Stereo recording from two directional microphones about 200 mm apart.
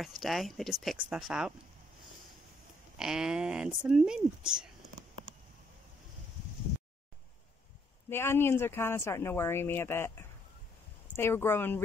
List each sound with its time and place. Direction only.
0.0 s speech: centre (ahead or behind)
3.0 s speech: 5° right (ahead or behind)
8.1 s speech: 10° left (ahead or behind)